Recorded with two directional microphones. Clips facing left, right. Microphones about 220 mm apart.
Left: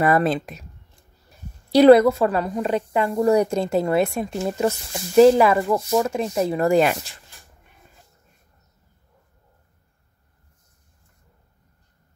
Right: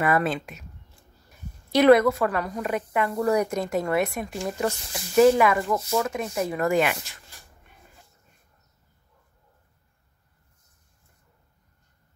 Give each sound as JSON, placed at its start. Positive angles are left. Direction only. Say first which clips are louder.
{"t": 0.0, "sound": "speech", "louder": "left 5 dB", "side_deg": 35}
{"t": 1.7, "sound": "a woman's voice", "louder": "left 5 dB", "side_deg": 30}